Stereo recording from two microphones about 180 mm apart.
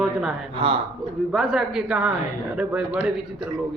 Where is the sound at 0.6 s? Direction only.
25° right (ahead or behind).